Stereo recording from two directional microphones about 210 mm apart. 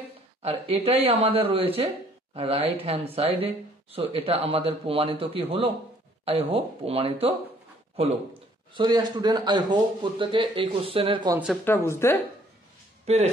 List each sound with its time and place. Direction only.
0.4 s speech: 30° right (ahead or behind)
8.7 s speech: 20° right (ahead or behind)
11.6 s a woman's voice: 10° left (ahead or behind)
13.0 s speech: 30° right (ahead or behind)